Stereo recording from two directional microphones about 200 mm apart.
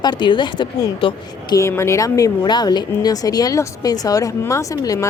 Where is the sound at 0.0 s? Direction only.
20° left (ahead or behind).